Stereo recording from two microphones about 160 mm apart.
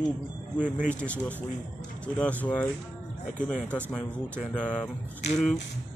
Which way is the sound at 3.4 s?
5° left (ahead or behind).